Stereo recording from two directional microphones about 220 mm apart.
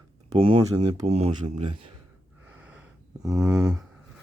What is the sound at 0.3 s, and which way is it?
Speech, 25° right (ahead or behind).